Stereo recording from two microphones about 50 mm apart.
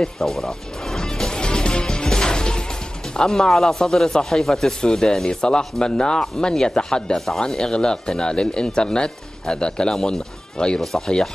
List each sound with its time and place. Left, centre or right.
0.0 s speech: centre
0.9 s music: centre
3.2 s speech: centre